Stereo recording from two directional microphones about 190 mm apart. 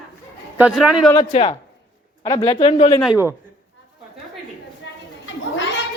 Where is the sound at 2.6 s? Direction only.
35° left (ahead or behind).